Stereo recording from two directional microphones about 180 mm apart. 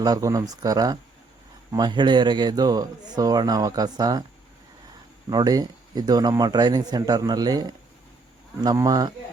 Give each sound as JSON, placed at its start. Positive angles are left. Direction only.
{"t": 0.0, "sound": "speech", "side_deg": -20}
{"t": 5.3, "sound": "speech", "side_deg": -20}